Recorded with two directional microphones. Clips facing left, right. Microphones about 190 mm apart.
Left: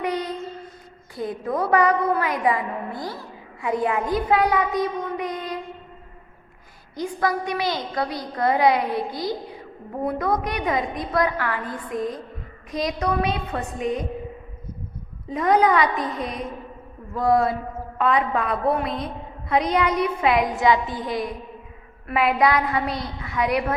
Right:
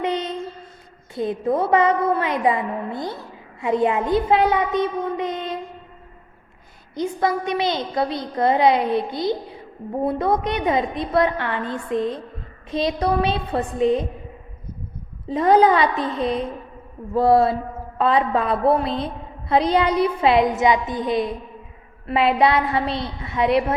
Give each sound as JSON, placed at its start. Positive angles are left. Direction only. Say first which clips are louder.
{"t": 0.0, "sound": "a sound", "louder": "right 2 dB", "side_deg": -25}
{"t": 1.1, "sound": "a woman's voice", "louder": "right 5 dB", "side_deg": -25}
{"t": 6.9, "sound": "a woman's voice", "louder": "right 2 dB", "side_deg": -20}
{"t": 15.3, "sound": "a woman's voice", "louder": "right 3 dB", "side_deg": -30}